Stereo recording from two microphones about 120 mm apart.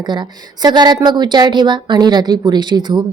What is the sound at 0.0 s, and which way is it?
A woman's voice, 35° right (ahead or behind).